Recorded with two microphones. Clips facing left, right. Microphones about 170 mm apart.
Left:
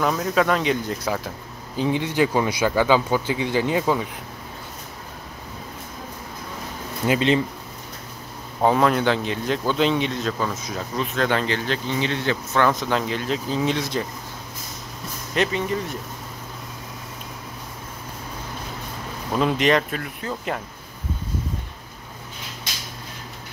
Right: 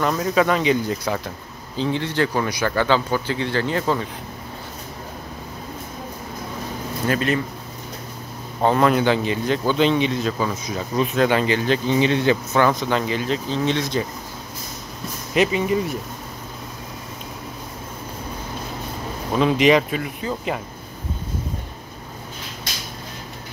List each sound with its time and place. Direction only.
0.0 s speech: centre (ahead or behind)
1.8 s speech: 10° left (ahead or behind)
7.1 s speech: 20° left (ahead or behind)
8.5 s speech: 5° left (ahead or behind); by 12.4 s 15° right (ahead or behind)
12.5 s speech: centre (ahead or behind)
15.3 s speech: 10° right (ahead or behind)
19.3 s speech: centre (ahead or behind)